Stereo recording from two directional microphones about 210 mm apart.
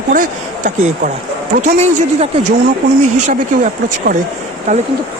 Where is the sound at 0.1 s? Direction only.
40° right (ahead or behind).